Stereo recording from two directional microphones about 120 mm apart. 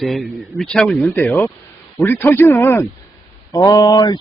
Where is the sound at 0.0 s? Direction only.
Centre (ahead or behind); by 2.8 s 20° left (ahead or behind).